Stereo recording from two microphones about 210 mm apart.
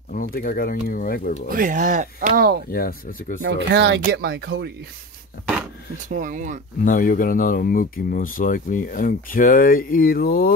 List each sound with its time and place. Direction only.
0.1 s speech: 40° left (ahead or behind)
1.5 s speech: 40° right (ahead or behind)
2.7 s speech: 45° left (ahead or behind)
3.4 s speech: 55° right (ahead or behind)
6.1 s speech: 40° right (ahead or behind)
6.8 s speech: 40° left (ahead or behind)